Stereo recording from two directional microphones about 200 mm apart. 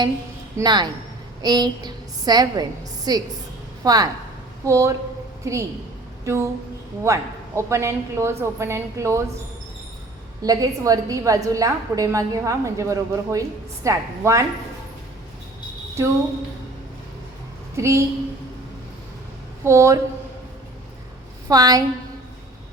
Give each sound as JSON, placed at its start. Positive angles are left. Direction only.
{"t": 0.5, "sound": "a woman's voice", "side_deg": -20}
{"t": 6.2, "sound": "a sound", "side_deg": -15}
{"t": 7.0, "sound": "a woman's voice", "side_deg": -15}
{"t": 10.4, "sound": "a woman's voice", "side_deg": -20}
{"t": 17.7, "sound": "a woman's voice", "side_deg": -15}
{"t": 19.6, "sound": "a woman's voice", "side_deg": -15}
{"t": 21.4, "sound": "a woman's voice", "side_deg": -15}